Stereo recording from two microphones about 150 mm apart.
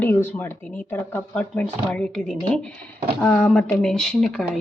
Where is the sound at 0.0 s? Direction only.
15° left (ahead or behind).